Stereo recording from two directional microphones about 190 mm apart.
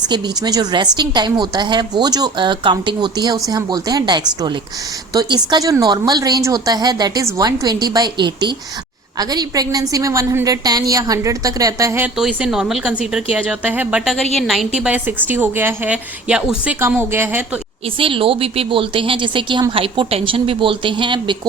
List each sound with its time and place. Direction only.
0.1 s a woman's voice: 20° right (ahead or behind)
17.8 s a woman's voice: 25° right (ahead or behind)